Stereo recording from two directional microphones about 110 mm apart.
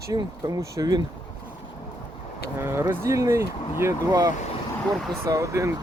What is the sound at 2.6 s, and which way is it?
Speech, 20° right (ahead or behind).